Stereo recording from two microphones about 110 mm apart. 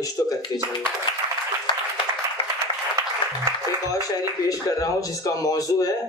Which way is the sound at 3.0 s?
30° right (ahead or behind).